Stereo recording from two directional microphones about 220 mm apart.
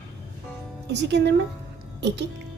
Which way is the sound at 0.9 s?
50° right (ahead or behind).